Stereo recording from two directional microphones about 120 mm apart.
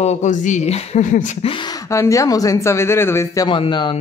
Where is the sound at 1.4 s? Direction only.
45° left (ahead or behind).